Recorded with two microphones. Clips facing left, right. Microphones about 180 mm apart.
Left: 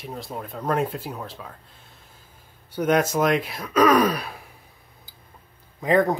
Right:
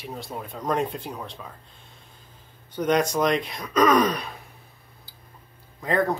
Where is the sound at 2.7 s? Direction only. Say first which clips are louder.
Left 1 dB; 10° left (ahead or behind).